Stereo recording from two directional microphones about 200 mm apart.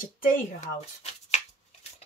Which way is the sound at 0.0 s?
45° left (ahead or behind).